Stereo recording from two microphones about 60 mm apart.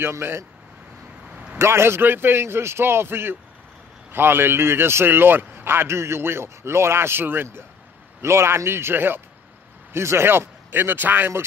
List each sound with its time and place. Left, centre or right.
0.1 s a man's voice: right
1.3 s a sound: right
1.6 s a man's voice: right